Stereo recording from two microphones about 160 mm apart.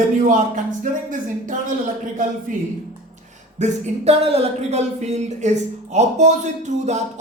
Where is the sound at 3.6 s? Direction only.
40° right (ahead or behind).